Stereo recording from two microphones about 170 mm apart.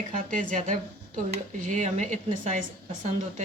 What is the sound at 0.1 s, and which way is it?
Speech, 50° right (ahead or behind).